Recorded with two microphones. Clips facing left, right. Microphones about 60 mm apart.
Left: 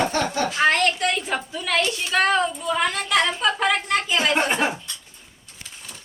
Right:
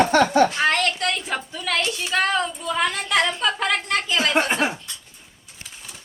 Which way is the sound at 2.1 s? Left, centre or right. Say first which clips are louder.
Left 2 dB; centre.